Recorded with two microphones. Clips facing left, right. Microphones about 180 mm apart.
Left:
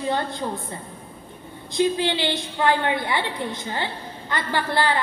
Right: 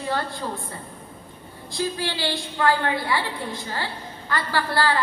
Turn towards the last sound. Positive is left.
turn(degrees=20)  # may be behind; listen again after turning